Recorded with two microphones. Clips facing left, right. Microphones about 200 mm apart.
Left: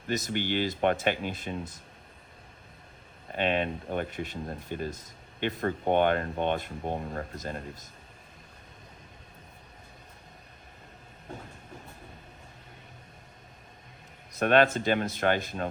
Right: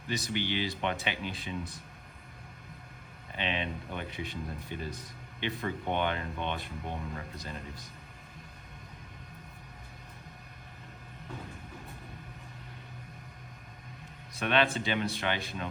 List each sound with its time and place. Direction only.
0.1 s speech: 45° left (ahead or behind)
3.3 s speech: 50° left (ahead or behind)
14.3 s speech: 45° left (ahead or behind)